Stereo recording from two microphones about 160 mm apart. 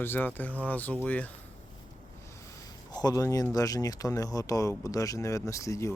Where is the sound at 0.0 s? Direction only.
10° left (ahead or behind).